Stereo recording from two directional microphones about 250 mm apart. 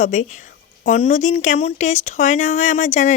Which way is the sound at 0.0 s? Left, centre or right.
Left.